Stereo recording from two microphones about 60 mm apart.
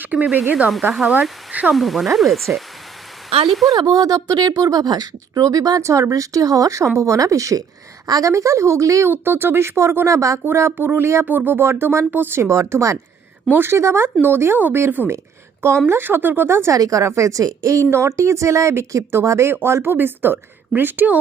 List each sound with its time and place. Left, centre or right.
0.0 s speech: right
0.7 s speech: centre
3.8 s speech: right
5.8 s speech: right
8.0 s a woman's voice: right
8.3 s speech: right
9.0 s speech: right
10.4 s a woman's voice: right
13.5 s a woman's voice: right
16.7 s speech: right
19.6 s a woman's voice: right